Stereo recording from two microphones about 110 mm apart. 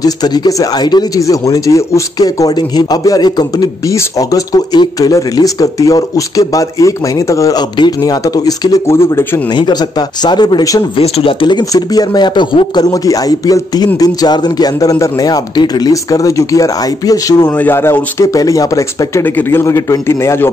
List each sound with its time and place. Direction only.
0.0 s speech: 40° left (ahead or behind); by 9.4 s 20° left (ahead or behind)
9.6 s speech: 40° left (ahead or behind)
11.0 s speech: 65° left (ahead or behind)
11.4 s speech: 40° left (ahead or behind)
17.6 s speech: 20° left (ahead or behind)
19.2 s speech: 20° left (ahead or behind)